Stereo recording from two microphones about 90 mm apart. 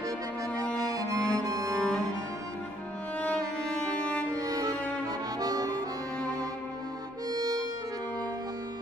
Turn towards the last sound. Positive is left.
turn(degrees=-45)  # may be behind; listen again after turning